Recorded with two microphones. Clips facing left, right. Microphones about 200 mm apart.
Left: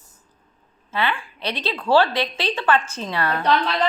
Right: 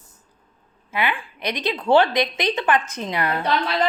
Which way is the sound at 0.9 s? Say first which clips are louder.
Even; 15° right (ahead or behind).